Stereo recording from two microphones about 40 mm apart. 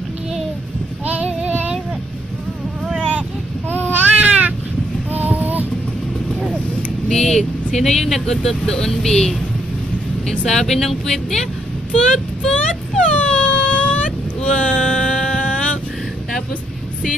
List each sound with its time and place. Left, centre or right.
1.2 s child singing: right
4.1 s babbling: right
5.1 s child singing: right
7.1 s speech: centre
10.4 s speech: centre
11.9 s a sound: left